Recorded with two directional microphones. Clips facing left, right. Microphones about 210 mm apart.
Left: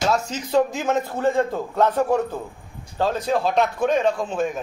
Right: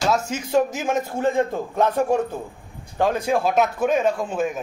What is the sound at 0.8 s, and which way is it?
A man's voice, 15° right (ahead or behind).